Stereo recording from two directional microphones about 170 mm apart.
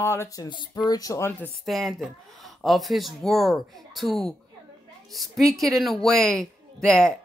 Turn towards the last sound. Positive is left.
turn(degrees=5)  # may be behind; listen again after turning